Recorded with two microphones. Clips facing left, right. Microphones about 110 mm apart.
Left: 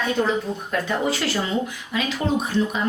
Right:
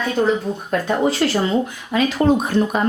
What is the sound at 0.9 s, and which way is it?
Speech, 40° right (ahead or behind).